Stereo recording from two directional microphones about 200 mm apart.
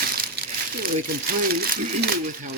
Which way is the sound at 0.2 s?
50° right (ahead or behind).